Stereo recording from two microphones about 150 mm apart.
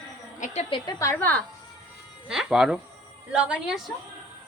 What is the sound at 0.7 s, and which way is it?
Speech, 25° left (ahead or behind).